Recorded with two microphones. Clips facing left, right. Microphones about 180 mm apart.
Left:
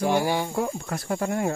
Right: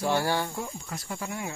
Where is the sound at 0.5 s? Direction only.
65° left (ahead or behind).